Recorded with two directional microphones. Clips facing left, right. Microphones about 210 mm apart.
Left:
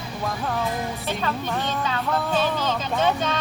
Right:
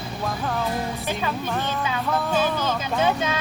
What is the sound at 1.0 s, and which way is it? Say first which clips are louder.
Speech: even; 10° right (ahead or behind).